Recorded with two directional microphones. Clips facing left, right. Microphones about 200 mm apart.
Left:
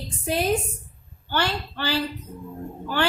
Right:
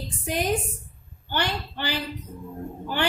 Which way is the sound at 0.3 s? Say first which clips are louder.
Left 2 dB; 15° right (ahead or behind).